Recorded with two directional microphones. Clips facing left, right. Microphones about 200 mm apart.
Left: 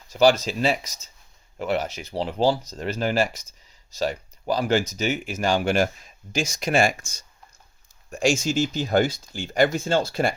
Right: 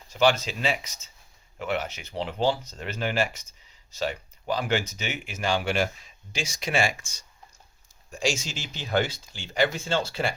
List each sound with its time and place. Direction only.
0.1 s speech: 40° left (ahead or behind)